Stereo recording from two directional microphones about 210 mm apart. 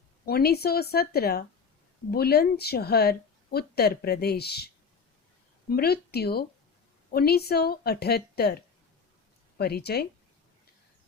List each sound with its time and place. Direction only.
0.3 s speech: 50° left (ahead or behind)
9.6 s speech: 50° left (ahead or behind)